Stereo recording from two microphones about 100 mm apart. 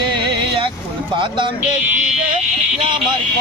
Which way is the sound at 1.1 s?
55° right (ahead or behind).